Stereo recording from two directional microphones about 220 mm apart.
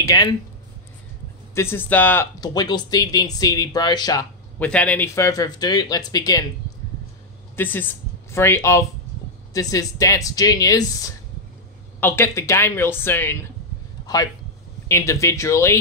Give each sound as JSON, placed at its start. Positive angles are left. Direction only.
{"t": 0.0, "sound": "speech", "side_deg": 15}
{"t": 1.5, "sound": "speech", "side_deg": 10}
{"t": 7.5, "sound": "a man's voice", "side_deg": 10}